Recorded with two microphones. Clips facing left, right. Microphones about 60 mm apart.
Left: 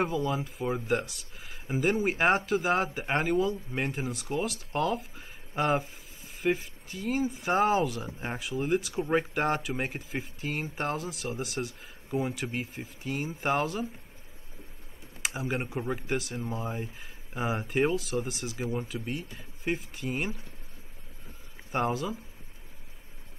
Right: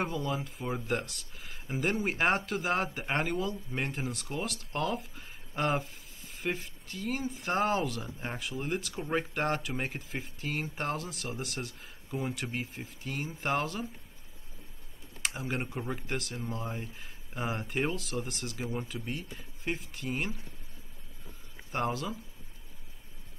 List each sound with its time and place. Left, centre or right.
0.0 s speech: centre
8.4 s speech: centre
8.9 s speech: centre
9.3 s speech: centre
15.2 s speech: centre
21.7 s speech: centre